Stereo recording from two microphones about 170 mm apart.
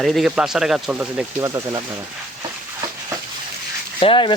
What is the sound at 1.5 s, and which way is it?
Speech, 20° right (ahead or behind).